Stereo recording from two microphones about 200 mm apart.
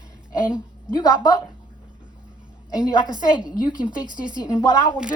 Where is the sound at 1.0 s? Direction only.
20° left (ahead or behind).